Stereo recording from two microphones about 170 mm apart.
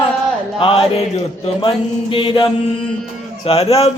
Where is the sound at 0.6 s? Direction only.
35° left (ahead or behind).